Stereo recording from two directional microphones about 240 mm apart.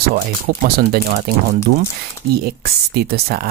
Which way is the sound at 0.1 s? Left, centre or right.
Right.